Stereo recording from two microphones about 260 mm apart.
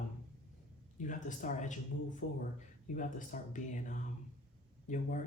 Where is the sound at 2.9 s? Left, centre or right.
Left.